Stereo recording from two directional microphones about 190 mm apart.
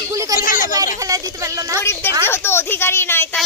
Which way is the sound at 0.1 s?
15° right (ahead or behind).